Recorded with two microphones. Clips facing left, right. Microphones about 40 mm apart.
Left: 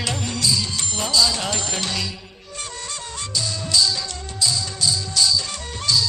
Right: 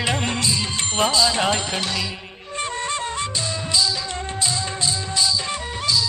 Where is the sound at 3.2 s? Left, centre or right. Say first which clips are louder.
Right 2 dB; right.